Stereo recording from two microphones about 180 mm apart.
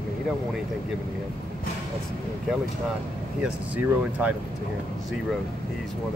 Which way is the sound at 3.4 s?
10° right (ahead or behind).